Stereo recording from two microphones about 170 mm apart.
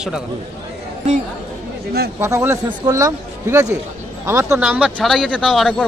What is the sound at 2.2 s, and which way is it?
Speech, 15° right (ahead or behind).